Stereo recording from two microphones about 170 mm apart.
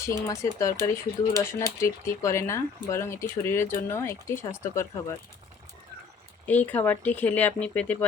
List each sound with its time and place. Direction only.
0.0 s speech: 20° left (ahead or behind)
6.4 s speech: 10° left (ahead or behind)